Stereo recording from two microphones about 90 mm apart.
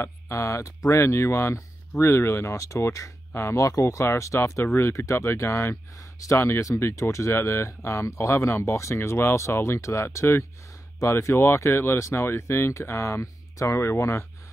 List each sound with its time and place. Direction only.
0.0 s speech: 30° left (ahead or behind)